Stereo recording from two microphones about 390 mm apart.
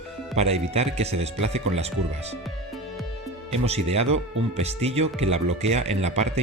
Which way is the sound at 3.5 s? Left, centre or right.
Centre.